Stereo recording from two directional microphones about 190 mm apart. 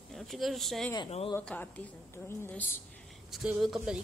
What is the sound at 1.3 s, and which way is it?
A woman's voice, 10° left (ahead or behind).